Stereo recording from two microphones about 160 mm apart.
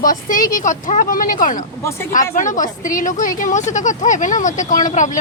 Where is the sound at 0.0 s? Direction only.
55° left (ahead or behind).